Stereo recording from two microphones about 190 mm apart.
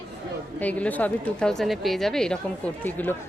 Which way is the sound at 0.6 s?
10° left (ahead or behind).